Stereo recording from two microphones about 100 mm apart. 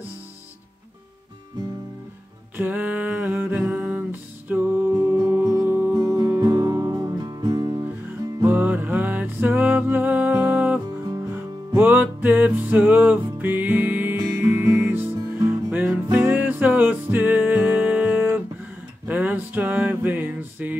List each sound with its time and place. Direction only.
2.5 s music: 20° right (ahead or behind)
5.9 s music: 30° right (ahead or behind)
8.4 s music: 20° right (ahead or behind)
19.0 s a sound: 15° right (ahead or behind)